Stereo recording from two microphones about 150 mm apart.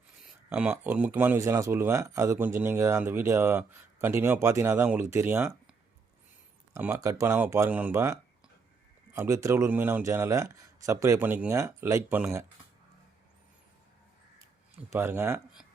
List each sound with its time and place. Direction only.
0.2 s a sound: 5° right (ahead or behind)
0.7 s speech: 10° right (ahead or behind)
6.7 s speech: 15° right (ahead or behind)
14.9 s speech: 15° right (ahead or behind)